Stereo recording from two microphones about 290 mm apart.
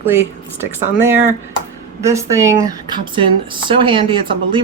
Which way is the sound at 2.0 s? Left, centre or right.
Centre.